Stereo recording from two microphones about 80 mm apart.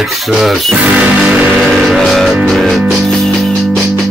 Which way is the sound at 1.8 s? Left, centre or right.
Centre.